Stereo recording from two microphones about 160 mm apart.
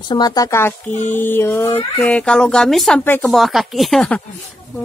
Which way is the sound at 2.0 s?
5° left (ahead or behind).